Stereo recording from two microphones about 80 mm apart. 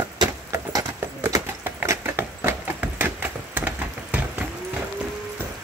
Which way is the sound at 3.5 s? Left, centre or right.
Centre.